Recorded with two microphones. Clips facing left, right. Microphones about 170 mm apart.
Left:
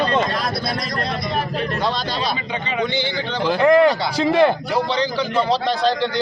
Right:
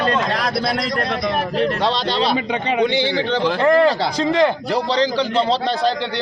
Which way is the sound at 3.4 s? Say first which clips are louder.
Left 2 dB; 5° left (ahead or behind).